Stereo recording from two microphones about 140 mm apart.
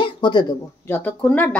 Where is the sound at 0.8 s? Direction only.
15° left (ahead or behind).